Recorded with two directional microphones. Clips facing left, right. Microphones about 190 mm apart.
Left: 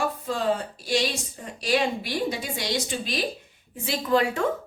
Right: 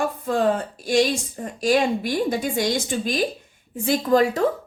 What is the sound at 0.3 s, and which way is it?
A woman's voice, 50° right (ahead or behind).